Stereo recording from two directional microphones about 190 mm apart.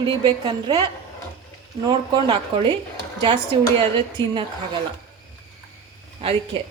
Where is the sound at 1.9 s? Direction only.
25° right (ahead or behind).